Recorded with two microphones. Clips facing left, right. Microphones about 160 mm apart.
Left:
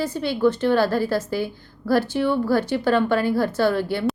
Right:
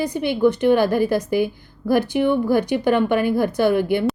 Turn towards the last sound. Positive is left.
turn(degrees=-15)  # may be behind; listen again after turning